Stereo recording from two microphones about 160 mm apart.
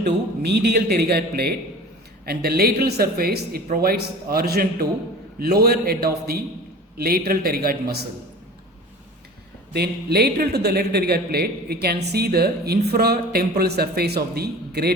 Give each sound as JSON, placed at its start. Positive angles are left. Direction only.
{"t": 0.0, "sound": "a man's voice", "side_deg": -90}
{"t": 9.7, "sound": "a man's voice", "side_deg": -85}